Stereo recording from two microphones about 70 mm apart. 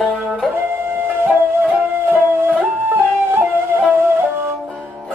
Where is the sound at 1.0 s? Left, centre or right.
Right.